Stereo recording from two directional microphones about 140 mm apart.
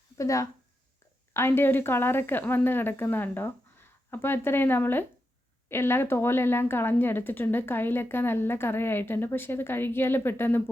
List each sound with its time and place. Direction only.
0.2 s speech: 20° left (ahead or behind)